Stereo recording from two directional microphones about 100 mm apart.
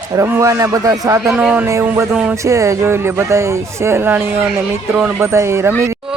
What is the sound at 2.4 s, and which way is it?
Speech, 30° right (ahead or behind).